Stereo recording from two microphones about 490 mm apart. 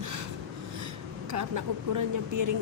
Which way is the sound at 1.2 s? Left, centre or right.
Right.